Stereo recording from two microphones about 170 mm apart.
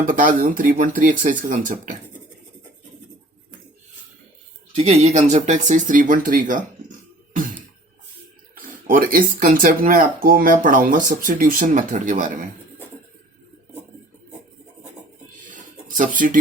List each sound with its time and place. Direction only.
0.0 s speech: 50° right (ahead or behind)
4.7 s speech: 40° right (ahead or behind)
8.5 s speech: 55° right (ahead or behind)
15.5 s a sound: 50° right (ahead or behind)